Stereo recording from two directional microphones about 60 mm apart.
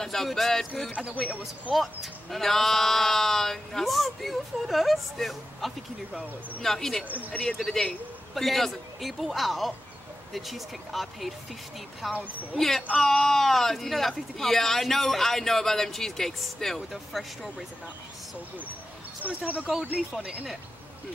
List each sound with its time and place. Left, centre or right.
0.0 s speech: centre
0.9 s speech: right
1.4 s speech: centre
19.2 s speech: right